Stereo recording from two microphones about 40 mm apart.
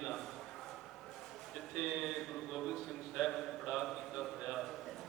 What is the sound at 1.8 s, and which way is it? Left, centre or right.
A man's voice, centre.